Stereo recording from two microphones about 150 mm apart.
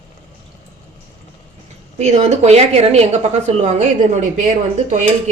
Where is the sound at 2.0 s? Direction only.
50° right (ahead or behind).